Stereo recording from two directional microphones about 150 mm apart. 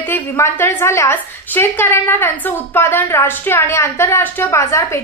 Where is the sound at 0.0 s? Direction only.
15° left (ahead or behind).